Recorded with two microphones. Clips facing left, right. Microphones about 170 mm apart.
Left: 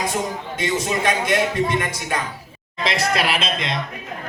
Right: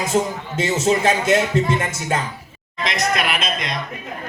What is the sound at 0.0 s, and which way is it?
A man's voice, 25° right (ahead or behind).